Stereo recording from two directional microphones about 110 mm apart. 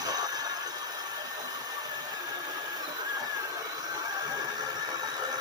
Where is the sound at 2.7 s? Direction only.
35° right (ahead or behind).